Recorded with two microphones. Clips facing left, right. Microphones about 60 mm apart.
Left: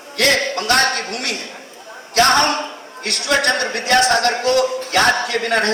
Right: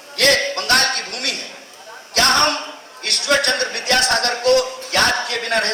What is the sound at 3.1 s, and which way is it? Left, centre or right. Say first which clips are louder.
Speech: left 1 dB; left.